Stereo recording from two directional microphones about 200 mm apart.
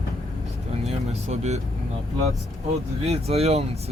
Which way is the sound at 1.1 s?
35° right (ahead or behind).